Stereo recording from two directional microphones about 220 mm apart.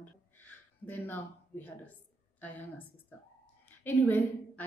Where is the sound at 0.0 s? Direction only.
10° left (ahead or behind).